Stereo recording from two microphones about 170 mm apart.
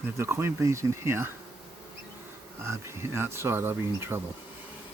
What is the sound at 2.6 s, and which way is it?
Speech, 15° right (ahead or behind).